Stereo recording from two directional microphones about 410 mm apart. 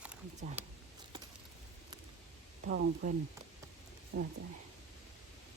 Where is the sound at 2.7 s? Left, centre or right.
Centre.